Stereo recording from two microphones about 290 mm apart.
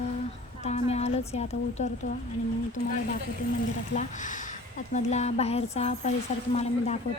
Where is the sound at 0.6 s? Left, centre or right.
Left.